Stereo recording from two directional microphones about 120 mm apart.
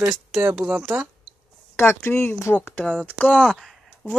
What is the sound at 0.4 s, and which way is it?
Speech, 10° right (ahead or behind).